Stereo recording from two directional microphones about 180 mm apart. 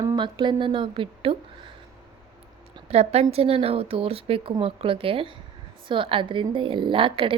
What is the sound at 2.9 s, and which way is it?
A woman's voice, 35° right (ahead or behind).